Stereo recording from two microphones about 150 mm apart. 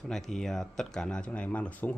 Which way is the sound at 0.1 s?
5° left (ahead or behind).